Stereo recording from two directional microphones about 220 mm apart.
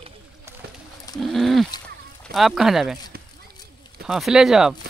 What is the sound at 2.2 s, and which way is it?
Speech, centre (ahead or behind).